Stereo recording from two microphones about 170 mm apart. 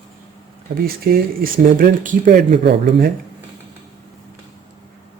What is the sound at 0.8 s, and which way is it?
Speech, 60° right (ahead or behind).